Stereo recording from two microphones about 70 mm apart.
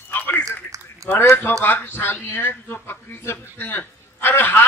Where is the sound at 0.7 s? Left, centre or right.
Right.